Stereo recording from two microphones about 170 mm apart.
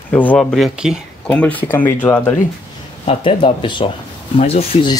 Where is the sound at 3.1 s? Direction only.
30° left (ahead or behind).